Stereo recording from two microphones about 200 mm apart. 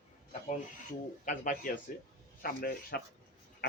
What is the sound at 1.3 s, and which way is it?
Speech, 40° left (ahead or behind).